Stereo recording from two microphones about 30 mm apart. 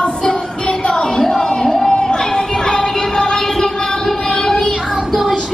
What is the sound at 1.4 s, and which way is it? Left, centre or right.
Music, left.